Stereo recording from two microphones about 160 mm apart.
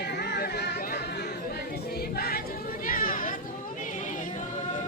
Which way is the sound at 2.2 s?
70° left (ahead or behind).